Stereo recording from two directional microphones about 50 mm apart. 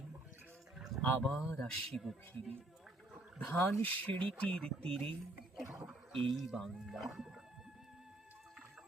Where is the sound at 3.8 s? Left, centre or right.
Left.